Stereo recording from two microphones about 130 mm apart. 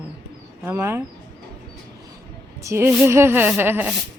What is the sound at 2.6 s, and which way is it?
Speech, 20° right (ahead or behind).